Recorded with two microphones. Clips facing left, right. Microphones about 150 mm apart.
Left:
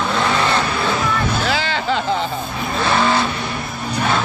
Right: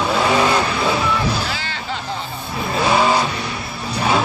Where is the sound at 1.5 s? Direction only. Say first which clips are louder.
Left 7 dB; 90° left.